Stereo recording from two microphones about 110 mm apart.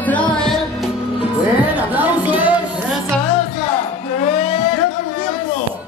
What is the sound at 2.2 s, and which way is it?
Music, 15° right (ahead or behind).